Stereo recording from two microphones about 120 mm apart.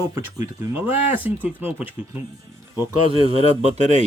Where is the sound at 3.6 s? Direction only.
75° right (ahead or behind).